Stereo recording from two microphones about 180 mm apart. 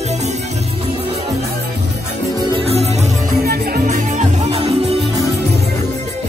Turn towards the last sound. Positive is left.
turn(degrees=-35)  # may be behind; listen again after turning